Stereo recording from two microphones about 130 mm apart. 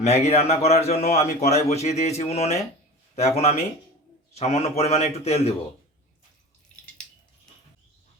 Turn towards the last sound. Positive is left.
turn(degrees=5)  # may be behind; listen again after turning